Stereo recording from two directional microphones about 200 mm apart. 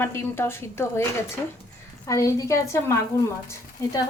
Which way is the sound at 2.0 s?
15° left (ahead or behind).